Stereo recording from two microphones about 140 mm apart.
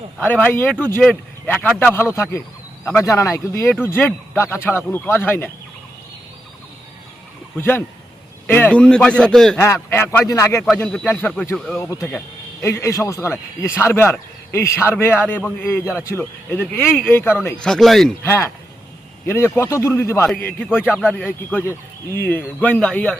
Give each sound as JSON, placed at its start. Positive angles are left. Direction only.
{"t": 0.2, "sound": "speech", "side_deg": 15}
{"t": 7.6, "sound": "a man's voice", "side_deg": 15}
{"t": 9.9, "sound": "speech", "side_deg": 15}
{"t": 10.8, "sound": "a man's voice", "side_deg": 5}
{"t": 11.8, "sound": "speech", "side_deg": 20}
{"t": 17.6, "sound": "a man's voice", "side_deg": 5}
{"t": 18.2, "sound": "speech", "side_deg": 20}